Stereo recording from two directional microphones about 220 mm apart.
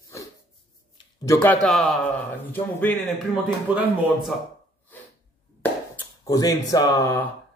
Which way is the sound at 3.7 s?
5° right (ahead or behind).